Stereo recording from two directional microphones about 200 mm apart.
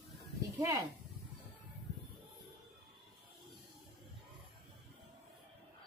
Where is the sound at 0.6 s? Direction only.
15° right (ahead or behind).